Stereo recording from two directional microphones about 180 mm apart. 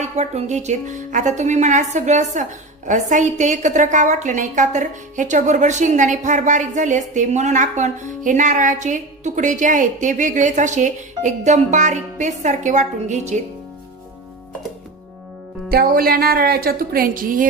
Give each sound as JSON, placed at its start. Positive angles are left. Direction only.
{"t": 0.0, "sound": "speech", "side_deg": -40}
{"t": 15.7, "sound": "a woman's voice", "side_deg": -55}